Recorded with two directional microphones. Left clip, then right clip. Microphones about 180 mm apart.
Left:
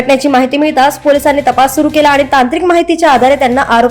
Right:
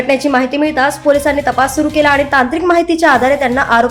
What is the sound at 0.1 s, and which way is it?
A woman's voice, 20° left (ahead or behind).